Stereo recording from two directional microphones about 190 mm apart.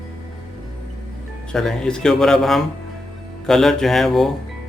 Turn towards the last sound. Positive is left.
turn(degrees=0)  # may be behind; listen again after turning